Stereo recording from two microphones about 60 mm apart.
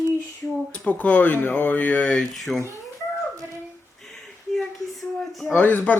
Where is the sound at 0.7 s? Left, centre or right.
Left.